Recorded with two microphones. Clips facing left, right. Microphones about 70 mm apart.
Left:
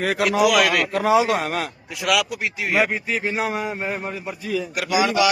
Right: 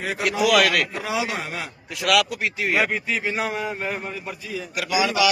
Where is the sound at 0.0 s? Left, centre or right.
Left.